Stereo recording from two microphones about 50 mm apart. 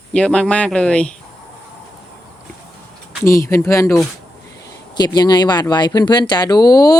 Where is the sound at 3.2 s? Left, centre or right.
Left.